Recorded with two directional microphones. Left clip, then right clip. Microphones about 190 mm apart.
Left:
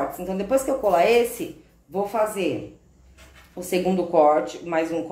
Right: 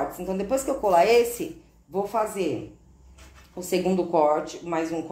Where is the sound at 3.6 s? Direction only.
15° right (ahead or behind).